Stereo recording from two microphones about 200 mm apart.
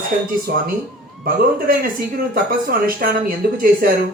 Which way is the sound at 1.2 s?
45° right (ahead or behind).